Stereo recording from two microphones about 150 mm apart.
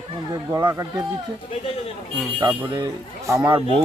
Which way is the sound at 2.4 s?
30° right (ahead or behind).